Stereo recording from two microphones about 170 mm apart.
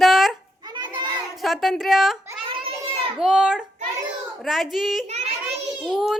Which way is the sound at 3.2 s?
5° right (ahead or behind).